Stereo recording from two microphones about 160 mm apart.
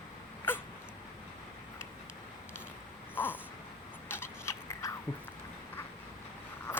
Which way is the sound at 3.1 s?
10° left (ahead or behind).